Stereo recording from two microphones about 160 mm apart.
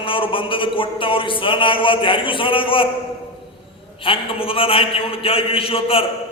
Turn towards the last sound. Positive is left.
turn(degrees=35)  # may be behind; listen again after turning